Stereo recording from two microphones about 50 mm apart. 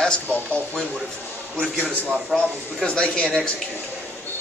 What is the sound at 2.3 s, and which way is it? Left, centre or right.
Speech, centre.